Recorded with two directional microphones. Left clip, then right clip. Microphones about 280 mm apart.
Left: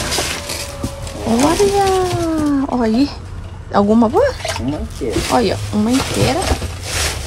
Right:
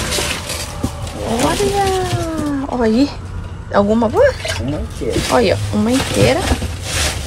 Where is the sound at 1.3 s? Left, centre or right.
Left.